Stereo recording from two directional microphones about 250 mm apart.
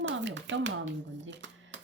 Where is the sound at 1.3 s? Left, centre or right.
Right.